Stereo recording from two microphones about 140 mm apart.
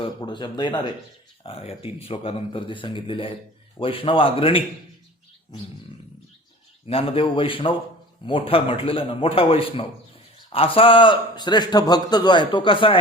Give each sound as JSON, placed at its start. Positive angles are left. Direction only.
{"t": 0.0, "sound": "a man's voice", "side_deg": 35}
{"t": 6.8, "sound": "a man's voice", "side_deg": 40}